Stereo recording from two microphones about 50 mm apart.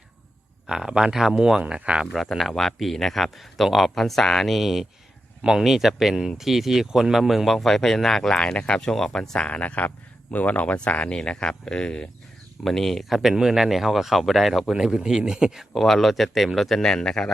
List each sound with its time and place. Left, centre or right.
0.7 s speech: centre
2.1 s speech: centre; by 8.9 s left
8.9 s speech: centre
9.5 s speech: left
12.6 s speech: centre
13.3 s speech: centre
15.7 s speech: centre
16.8 s speech: centre